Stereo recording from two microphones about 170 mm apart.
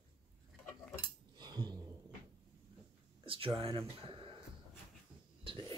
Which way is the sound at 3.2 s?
30° right (ahead or behind).